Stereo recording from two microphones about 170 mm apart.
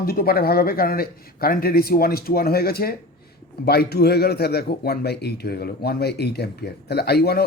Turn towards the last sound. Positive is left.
turn(degrees=70)  # may be behind; listen again after turning